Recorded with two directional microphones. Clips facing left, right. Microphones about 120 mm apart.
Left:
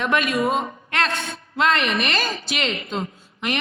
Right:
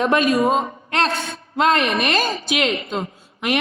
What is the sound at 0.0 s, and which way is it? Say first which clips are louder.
A man's voice: right 4 dB; 35° right (ahead or behind).